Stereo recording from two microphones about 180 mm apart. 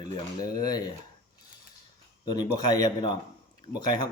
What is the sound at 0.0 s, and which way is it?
Speech, 25° left (ahead or behind).